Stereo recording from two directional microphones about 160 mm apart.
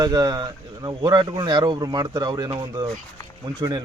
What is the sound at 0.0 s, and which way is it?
Speech, 25° right (ahead or behind).